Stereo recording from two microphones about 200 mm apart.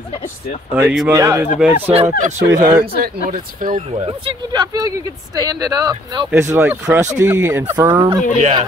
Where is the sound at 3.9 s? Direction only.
25° right (ahead or behind); by 7.7 s 10° right (ahead or behind).